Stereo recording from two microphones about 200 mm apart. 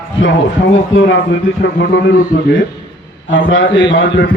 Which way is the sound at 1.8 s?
60° left (ahead or behind).